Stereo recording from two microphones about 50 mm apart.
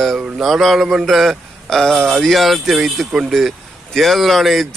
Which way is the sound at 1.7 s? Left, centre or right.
Centre.